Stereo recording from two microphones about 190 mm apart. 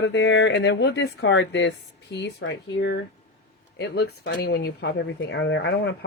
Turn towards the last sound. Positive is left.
turn(degrees=60)  # may be behind; listen again after turning